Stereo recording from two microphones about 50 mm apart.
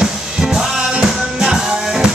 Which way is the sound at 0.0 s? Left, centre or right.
Centre.